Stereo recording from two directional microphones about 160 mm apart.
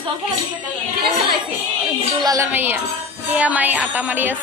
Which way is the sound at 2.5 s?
10° right (ahead or behind).